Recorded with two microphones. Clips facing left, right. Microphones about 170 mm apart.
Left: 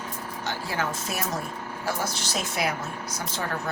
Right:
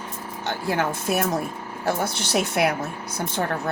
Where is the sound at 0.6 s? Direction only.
60° right (ahead or behind).